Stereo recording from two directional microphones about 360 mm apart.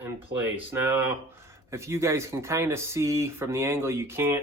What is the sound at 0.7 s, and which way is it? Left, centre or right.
Speech, centre.